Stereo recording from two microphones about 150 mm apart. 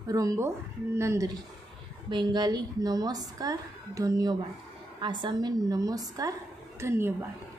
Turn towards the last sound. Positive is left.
turn(degrees=-15)  # may be behind; listen again after turning